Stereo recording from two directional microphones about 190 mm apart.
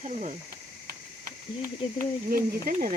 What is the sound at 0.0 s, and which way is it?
Speech, 40° right (ahead or behind).